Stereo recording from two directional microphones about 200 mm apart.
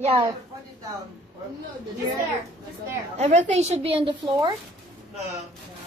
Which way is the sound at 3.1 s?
35° right (ahead or behind).